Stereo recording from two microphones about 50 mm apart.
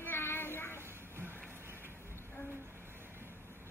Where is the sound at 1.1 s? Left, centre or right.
Right.